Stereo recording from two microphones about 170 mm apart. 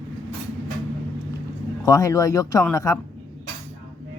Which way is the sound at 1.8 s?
20° left (ahead or behind).